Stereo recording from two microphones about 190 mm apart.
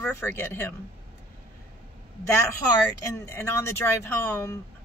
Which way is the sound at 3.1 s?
15° left (ahead or behind).